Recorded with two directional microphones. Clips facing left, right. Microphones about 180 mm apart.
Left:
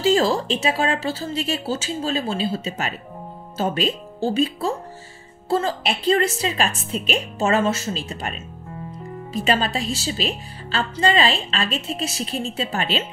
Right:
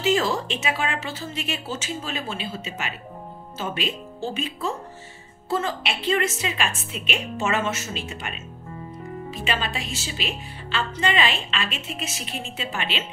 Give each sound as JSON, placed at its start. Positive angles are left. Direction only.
{"t": 0.0, "sound": "a woman's voice", "side_deg": 35}